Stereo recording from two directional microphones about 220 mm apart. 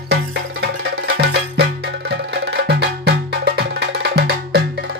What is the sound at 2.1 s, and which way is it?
Music, 50° right (ahead or behind).